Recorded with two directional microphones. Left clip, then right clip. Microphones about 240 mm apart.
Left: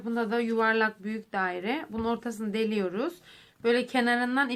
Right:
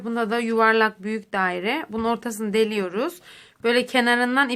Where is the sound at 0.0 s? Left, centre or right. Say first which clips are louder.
Right 5 dB; right.